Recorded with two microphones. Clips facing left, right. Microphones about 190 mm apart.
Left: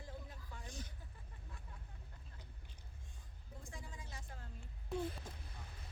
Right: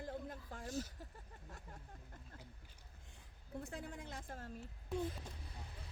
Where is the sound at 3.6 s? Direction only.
65° right (ahead or behind).